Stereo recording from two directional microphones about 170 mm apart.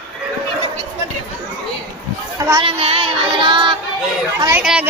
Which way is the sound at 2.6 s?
35° right (ahead or behind).